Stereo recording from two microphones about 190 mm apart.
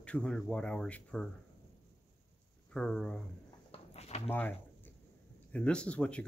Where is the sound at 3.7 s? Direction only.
35° left (ahead or behind).